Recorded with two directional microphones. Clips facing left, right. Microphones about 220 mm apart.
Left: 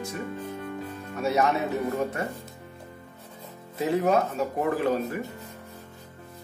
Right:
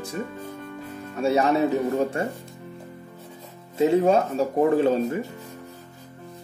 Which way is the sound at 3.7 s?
25° right (ahead or behind).